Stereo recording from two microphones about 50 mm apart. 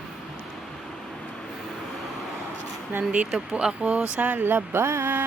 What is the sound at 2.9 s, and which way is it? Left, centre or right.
Speech, right.